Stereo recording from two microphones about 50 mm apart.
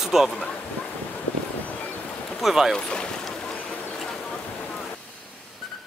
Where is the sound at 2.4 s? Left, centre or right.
Centre.